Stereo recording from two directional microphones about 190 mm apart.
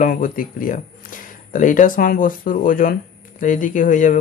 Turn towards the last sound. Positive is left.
turn(degrees=40)  # may be behind; listen again after turning